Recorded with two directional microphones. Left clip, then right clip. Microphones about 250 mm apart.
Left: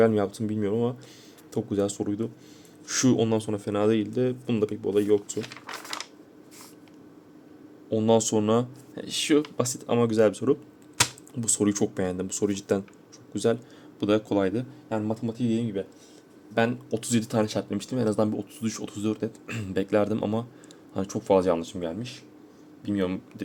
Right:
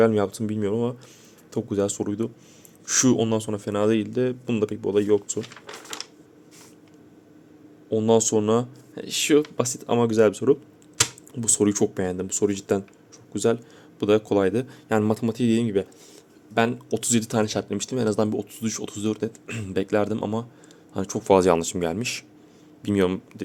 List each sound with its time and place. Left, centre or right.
0.0 s speech: centre
7.9 s speech: centre
14.8 s speech: right
16.6 s speech: centre